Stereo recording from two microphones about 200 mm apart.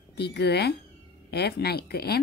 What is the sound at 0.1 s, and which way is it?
A woman's voice, 55° left (ahead or behind).